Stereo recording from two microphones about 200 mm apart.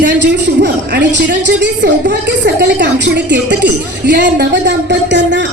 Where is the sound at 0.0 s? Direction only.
60° right (ahead or behind).